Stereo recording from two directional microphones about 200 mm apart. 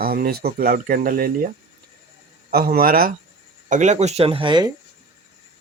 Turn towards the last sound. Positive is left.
turn(degrees=-25)  # may be behind; listen again after turning